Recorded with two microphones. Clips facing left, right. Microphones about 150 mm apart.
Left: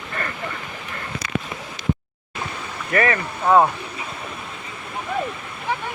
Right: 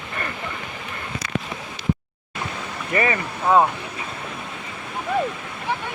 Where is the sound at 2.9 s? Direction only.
20° right (ahead or behind).